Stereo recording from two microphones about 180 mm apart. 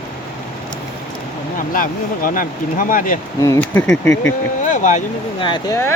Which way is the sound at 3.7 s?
5° left (ahead or behind).